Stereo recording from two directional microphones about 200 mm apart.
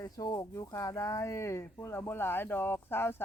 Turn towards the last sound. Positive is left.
turn(degrees=10)  # may be behind; listen again after turning